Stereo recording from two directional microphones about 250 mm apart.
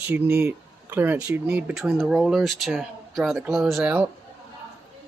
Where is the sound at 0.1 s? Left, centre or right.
Centre.